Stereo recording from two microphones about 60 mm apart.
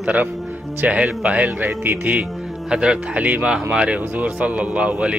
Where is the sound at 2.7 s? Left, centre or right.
Centre.